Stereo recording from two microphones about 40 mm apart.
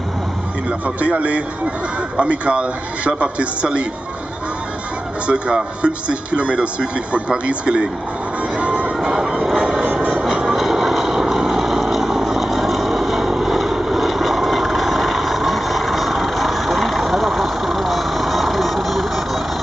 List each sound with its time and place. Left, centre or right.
0.7 s a man's voice: right
5.2 s a man's voice: right
8.5 s music: right
10.2 s vehicle: centre